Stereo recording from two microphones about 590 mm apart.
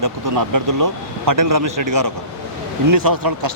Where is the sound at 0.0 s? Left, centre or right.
Right.